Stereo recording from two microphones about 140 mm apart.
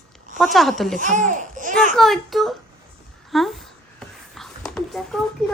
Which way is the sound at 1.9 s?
Centre (ahead or behind).